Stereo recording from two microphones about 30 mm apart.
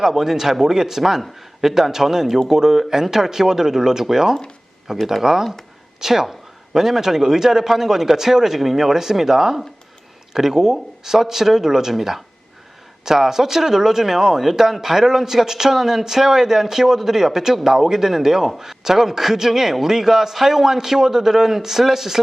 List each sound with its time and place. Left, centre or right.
0.1 s a woman's voice: centre